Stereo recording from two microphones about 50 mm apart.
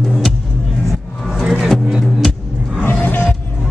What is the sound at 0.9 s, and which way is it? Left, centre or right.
Vehicle, centre.